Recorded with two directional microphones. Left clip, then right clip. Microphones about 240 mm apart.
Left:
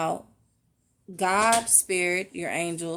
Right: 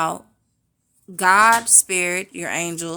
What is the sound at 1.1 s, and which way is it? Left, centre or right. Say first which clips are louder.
Speech: right 8 dB; right.